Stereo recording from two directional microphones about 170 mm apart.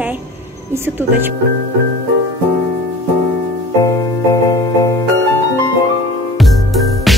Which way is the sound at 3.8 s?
20° left (ahead or behind).